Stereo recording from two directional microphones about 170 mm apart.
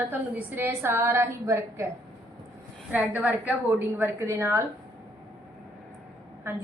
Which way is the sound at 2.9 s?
10° right (ahead or behind).